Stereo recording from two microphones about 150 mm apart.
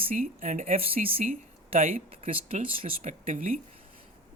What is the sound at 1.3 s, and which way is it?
Speech, 65° right (ahead or behind).